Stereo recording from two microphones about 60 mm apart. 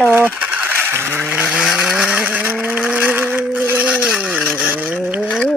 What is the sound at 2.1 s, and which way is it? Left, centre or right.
Vehicle, right.